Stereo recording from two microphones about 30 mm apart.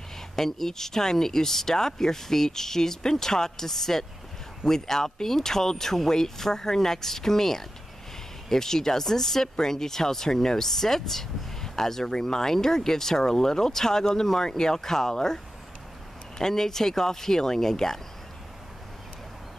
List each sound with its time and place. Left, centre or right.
0.4 s speech: centre